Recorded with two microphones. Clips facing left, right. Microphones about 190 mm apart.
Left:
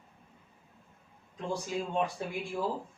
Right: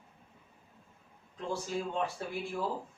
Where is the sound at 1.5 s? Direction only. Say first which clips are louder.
Left 1 dB; 15° left (ahead or behind).